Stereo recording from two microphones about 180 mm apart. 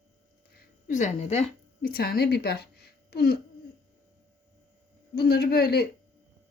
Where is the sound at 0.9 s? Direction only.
40° left (ahead or behind).